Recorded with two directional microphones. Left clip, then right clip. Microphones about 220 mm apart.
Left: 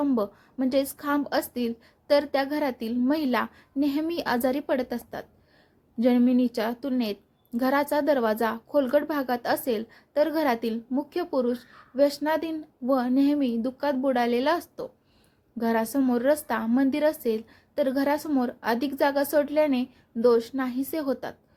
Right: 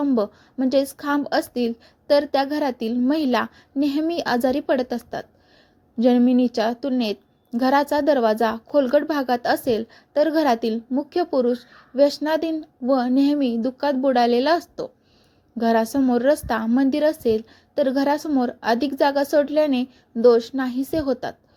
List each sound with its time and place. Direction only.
0.0 s a woman's voice: 15° right (ahead or behind)